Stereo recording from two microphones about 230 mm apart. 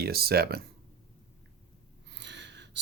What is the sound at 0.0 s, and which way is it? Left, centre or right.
Speech, right.